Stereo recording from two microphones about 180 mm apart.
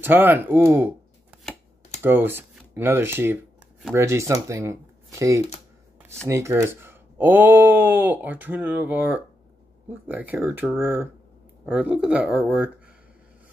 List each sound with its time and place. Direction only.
0.0 s speech: 10° right (ahead or behind)
2.0 s speech: 10° right (ahead or behind)